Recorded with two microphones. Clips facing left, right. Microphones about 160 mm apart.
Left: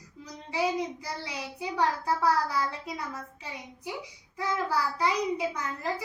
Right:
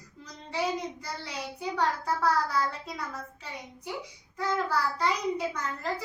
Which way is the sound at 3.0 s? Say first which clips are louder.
Even; centre (ahead or behind).